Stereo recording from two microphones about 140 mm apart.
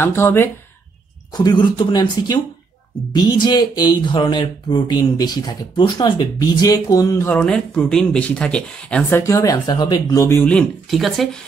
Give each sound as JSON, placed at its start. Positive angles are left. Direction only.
{"t": 0.0, "sound": "speech", "side_deg": 15}
{"t": 1.3, "sound": "speech", "side_deg": 30}
{"t": 7.3, "sound": "speech", "side_deg": 5}
{"t": 9.2, "sound": "speech", "side_deg": 25}
{"t": 10.9, "sound": "speech", "side_deg": 0}